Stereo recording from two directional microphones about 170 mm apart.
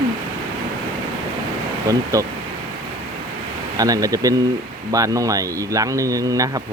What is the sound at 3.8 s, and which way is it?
Speech, 20° right (ahead or behind).